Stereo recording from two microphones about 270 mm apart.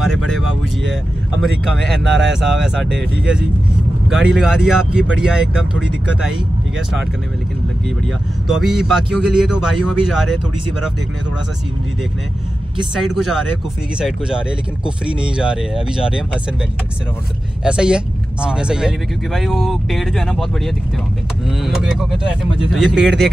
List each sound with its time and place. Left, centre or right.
0.0 s speech: centre
2.0 s speech: right
2.4 s speech: centre
8.5 s speech: centre
13.0 s speech: centre
17.6 s speech: centre